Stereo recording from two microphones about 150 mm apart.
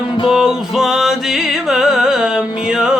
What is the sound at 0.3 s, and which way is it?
Music, 5° right (ahead or behind).